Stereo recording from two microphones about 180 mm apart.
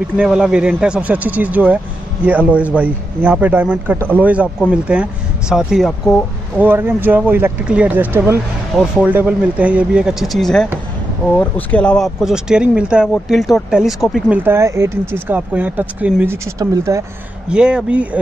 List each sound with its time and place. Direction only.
0.2 s speech: 5° right (ahead or behind)
6.6 s speech: 10° right (ahead or behind)
14.4 s speech: 15° right (ahead or behind)
17.5 s speech: 5° right (ahead or behind)